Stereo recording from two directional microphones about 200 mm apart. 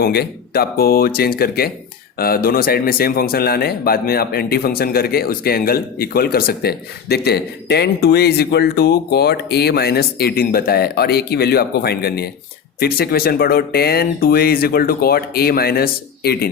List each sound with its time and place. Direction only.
0.0 s speech: 50° left (ahead or behind)